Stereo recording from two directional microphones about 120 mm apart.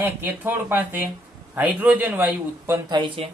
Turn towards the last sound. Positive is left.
turn(degrees=-40)  # may be behind; listen again after turning